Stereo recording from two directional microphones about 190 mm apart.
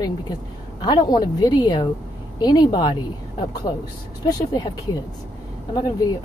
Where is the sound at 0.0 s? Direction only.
20° left (ahead or behind).